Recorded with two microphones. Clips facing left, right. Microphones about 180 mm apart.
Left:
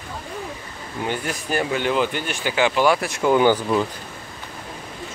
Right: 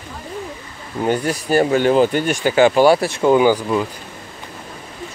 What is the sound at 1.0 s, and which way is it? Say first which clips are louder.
Speech: right 7 dB; 40° right (ahead or behind).